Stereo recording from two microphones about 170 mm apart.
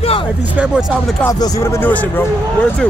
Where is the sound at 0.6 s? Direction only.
5° right (ahead or behind).